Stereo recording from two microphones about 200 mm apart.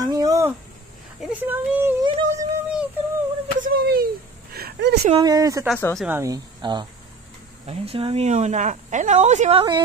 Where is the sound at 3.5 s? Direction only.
45° right (ahead or behind).